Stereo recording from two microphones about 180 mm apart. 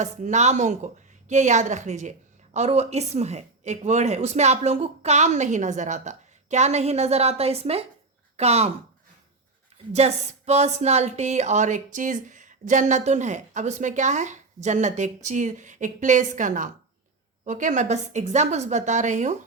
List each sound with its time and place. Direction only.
0.0 s speech: 40° right (ahead or behind)
9.9 s speech: 35° right (ahead or behind)